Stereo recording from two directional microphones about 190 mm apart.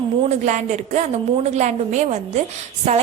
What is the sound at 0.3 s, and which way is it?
A woman's voice, 40° right (ahead or behind).